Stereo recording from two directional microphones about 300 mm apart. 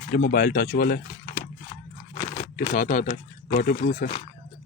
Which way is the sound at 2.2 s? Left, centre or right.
Left.